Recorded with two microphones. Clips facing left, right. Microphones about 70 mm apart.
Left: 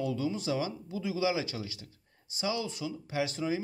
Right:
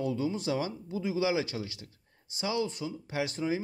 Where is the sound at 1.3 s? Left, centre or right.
Right.